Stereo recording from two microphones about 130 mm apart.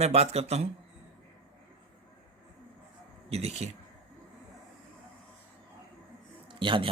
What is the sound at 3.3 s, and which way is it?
Speech, 55° right (ahead or behind).